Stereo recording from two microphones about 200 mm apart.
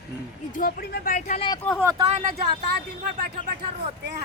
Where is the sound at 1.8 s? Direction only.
15° right (ahead or behind).